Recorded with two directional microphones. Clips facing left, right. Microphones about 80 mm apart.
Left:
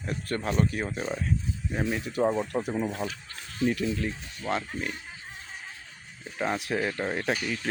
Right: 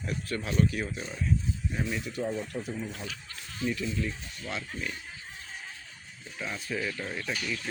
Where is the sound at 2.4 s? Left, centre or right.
Left.